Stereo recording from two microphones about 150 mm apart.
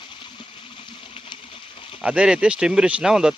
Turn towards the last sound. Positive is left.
turn(degrees=-5)  # may be behind; listen again after turning